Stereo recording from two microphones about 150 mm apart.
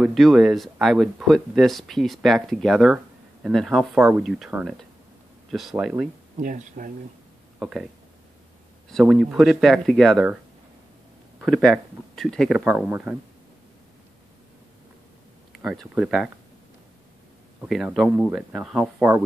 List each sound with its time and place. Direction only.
0.0 s speech: centre (ahead or behind)
6.3 s speech: 60° right (ahead or behind)
7.5 s speech: 5° right (ahead or behind)
9.0 s speech: 5° right (ahead or behind)
11.4 s speech: centre (ahead or behind)
15.6 s speech: centre (ahead or behind)
17.6 s speech: 5° right (ahead or behind)